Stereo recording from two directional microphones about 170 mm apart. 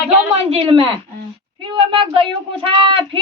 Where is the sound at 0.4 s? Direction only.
35° right (ahead or behind).